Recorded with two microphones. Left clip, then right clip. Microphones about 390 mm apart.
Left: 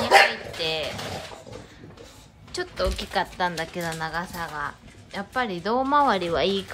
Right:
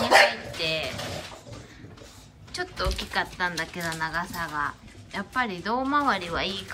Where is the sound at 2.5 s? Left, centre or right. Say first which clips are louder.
Left 3 dB; centre.